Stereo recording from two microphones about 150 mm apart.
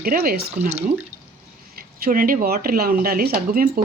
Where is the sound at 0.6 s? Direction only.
50° right (ahead or behind).